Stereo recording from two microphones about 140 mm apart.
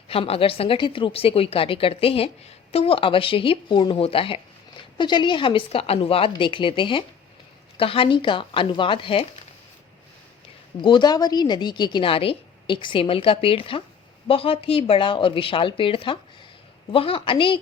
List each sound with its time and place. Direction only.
0.1 s a woman's voice: 45° left (ahead or behind)
10.8 s a woman's voice: 35° left (ahead or behind)